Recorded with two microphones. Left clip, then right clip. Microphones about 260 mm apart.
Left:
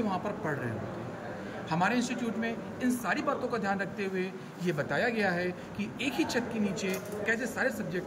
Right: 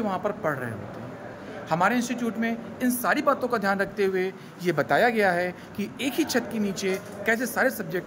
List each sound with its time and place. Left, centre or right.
1.7 s speech: centre